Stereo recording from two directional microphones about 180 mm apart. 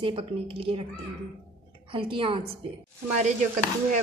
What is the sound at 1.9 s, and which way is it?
Speech, 30° right (ahead or behind).